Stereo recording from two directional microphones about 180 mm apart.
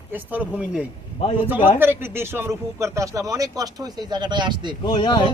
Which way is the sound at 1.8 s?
10° right (ahead or behind).